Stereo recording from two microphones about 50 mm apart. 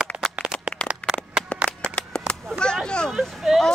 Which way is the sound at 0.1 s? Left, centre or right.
Right.